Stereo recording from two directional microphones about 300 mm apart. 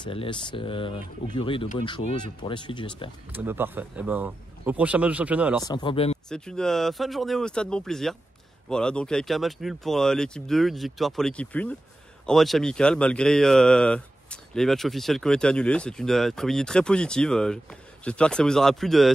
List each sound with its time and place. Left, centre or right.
0.0 s speech: centre
3.3 s speech: centre
5.7 s speech: centre
6.2 s speech: centre